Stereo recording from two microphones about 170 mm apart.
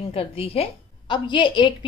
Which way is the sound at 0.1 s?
35° left (ahead or behind).